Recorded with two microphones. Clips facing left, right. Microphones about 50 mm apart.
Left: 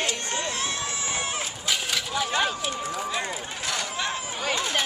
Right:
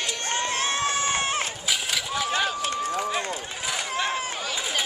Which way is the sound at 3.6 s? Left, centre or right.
Centre.